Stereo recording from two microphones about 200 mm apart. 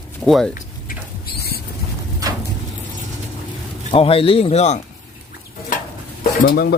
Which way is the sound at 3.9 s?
30° left (ahead or behind).